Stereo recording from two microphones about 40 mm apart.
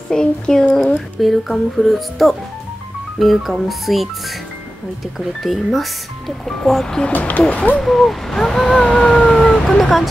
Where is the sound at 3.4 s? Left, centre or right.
Centre.